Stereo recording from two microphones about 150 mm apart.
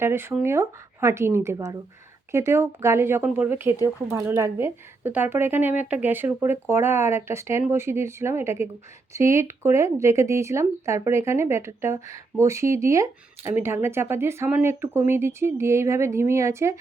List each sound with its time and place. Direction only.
0.0 s speech: 15° right (ahead or behind)